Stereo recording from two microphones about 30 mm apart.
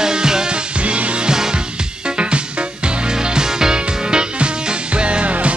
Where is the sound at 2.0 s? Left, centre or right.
Right.